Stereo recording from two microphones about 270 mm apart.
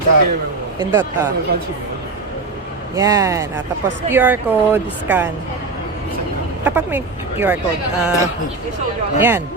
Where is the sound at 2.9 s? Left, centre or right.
Centre.